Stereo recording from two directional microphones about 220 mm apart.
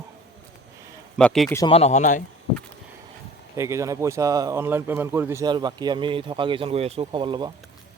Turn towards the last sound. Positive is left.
turn(degrees=-20)  # may be behind; listen again after turning